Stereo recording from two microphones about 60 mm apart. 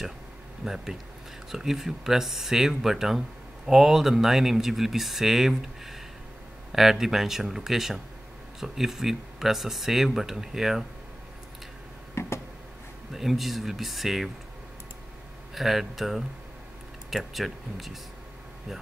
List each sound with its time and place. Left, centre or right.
0.7 s speech: centre
12.2 s a sound: left
13.1 s speech: centre
15.5 s speech: centre